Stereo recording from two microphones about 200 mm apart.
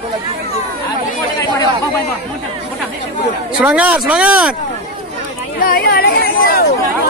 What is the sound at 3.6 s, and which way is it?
Speech, 5° right (ahead or behind).